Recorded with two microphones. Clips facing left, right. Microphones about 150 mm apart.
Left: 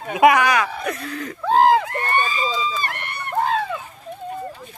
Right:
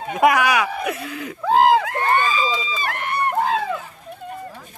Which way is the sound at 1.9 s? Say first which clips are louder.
Right 3 dB; 90° right.